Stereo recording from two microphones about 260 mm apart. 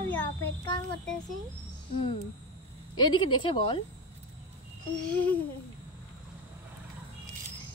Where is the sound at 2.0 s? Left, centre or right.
Left.